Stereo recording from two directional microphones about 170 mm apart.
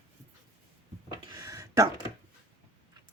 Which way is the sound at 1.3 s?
20° right (ahead or behind).